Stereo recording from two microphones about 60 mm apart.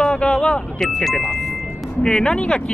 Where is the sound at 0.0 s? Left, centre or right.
Centre.